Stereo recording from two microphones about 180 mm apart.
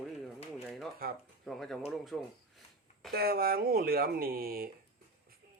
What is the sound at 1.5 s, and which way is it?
Speech, centre (ahead or behind).